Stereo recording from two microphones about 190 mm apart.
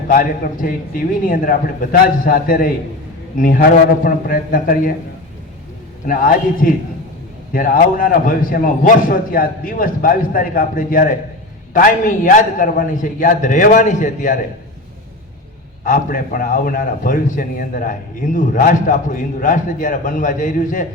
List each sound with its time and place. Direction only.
0.1 s a man's voice: 45° left (ahead or behind)
6.1 s a man's voice: 45° left (ahead or behind)
15.8 s a man's voice: 45° left (ahead or behind)